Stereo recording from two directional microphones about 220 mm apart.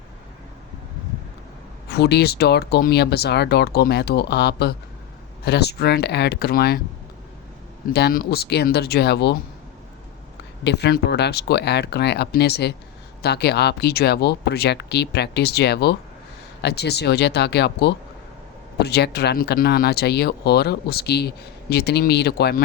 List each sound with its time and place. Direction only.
1.9 s speech: 50° left (ahead or behind)
7.9 s speech: 45° left (ahead or behind)
10.6 s speech: 50° left (ahead or behind)